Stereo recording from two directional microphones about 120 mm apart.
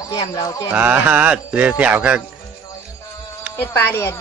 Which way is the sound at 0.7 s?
15° right (ahead or behind).